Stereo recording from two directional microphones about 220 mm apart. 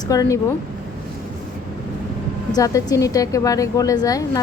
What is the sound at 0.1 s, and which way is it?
Speech, 15° left (ahead or behind).